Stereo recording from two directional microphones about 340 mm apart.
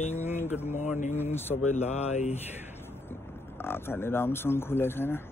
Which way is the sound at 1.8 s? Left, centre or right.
Centre.